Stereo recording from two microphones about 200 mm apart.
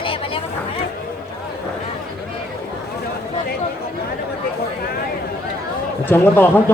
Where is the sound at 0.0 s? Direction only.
25° left (ahead or behind).